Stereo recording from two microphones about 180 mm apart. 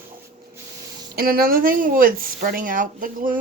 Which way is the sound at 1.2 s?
55° right (ahead or behind).